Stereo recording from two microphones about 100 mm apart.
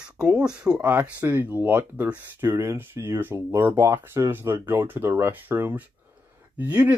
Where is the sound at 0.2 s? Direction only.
10° right (ahead or behind).